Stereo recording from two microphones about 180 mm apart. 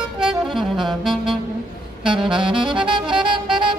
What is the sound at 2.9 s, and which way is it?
Saxophone, 25° right (ahead or behind).